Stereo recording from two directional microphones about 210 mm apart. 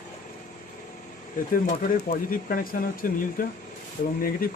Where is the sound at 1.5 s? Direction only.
40° left (ahead or behind).